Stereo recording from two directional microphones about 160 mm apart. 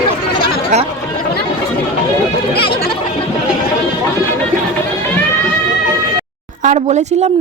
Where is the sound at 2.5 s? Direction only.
85° left.